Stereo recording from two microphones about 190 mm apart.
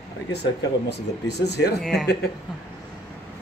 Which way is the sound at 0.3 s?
60° left (ahead or behind).